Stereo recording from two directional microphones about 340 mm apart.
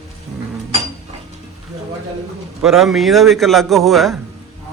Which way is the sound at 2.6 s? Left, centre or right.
Centre.